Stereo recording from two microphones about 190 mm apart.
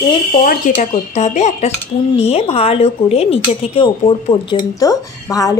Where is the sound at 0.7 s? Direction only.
45° left (ahead or behind).